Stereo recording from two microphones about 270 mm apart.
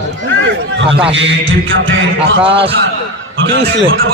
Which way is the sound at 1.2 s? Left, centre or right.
Right.